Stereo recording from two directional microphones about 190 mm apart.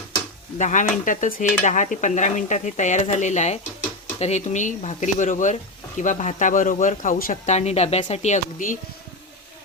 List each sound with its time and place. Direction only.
0.6 s speech: 40° left (ahead or behind)